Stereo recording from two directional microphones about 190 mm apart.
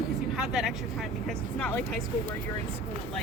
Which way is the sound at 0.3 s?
Centre (ahead or behind).